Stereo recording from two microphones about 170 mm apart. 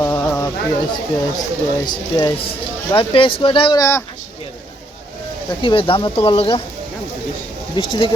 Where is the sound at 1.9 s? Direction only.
25° left (ahead or behind).